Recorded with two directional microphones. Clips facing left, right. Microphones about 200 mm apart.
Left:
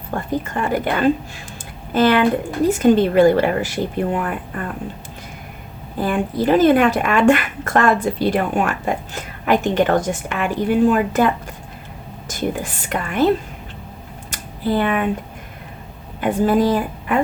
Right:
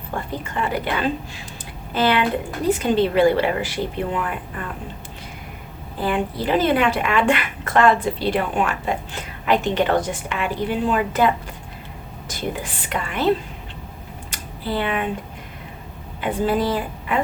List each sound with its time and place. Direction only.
0.4 s speech: 45° left (ahead or behind)
6.0 s speech: 45° left (ahead or behind)
12.3 s speech: 45° left (ahead or behind)
14.3 s a sound: 45° left (ahead or behind)
16.2 s speech: 45° left (ahead or behind)